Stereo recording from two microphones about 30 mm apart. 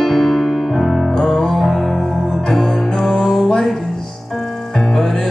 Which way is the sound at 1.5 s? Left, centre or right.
Centre.